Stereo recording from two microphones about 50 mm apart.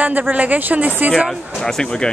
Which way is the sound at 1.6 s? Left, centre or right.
Centre.